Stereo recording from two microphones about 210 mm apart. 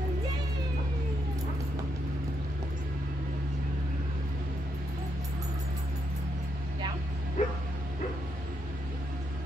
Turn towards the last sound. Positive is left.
turn(degrees=35)  # may be behind; listen again after turning